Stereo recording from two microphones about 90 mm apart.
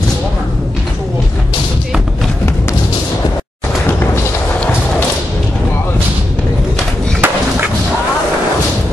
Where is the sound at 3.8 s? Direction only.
25° left (ahead or behind).